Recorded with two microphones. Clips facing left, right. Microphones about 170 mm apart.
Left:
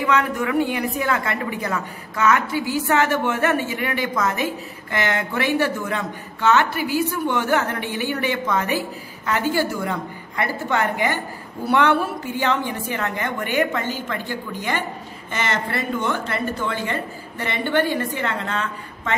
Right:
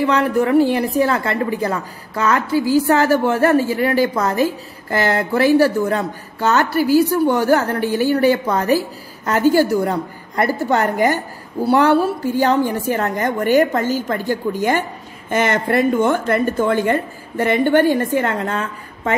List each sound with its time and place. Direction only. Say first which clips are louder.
0.0 s a woman's voice: right 5 dB; 35° right (ahead or behind)